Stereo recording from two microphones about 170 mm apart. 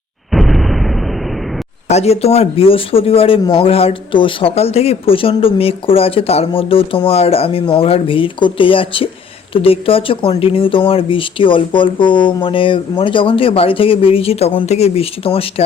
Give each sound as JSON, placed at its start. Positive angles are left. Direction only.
{"t": 0.3, "sound": "explosion", "side_deg": 0}
{"t": 1.9, "sound": "speech", "side_deg": 40}